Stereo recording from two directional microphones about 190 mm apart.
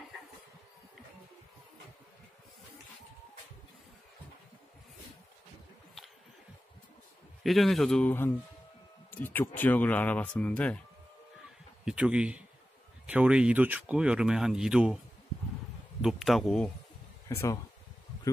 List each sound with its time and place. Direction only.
7.4 s speech: centre (ahead or behind)
11.8 s speech: 5° right (ahead or behind)
16.0 s speech: centre (ahead or behind)
17.3 s speech: 15° left (ahead or behind)